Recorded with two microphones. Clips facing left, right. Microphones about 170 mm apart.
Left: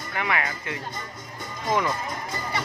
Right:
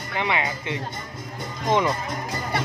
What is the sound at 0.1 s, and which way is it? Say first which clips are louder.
Speech: right 2 dB; 20° right (ahead or behind).